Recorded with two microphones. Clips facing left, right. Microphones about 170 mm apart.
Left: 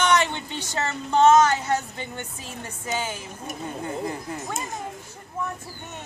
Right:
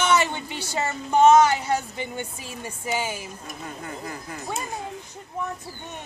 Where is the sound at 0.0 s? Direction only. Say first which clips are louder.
Even; 5° right (ahead or behind).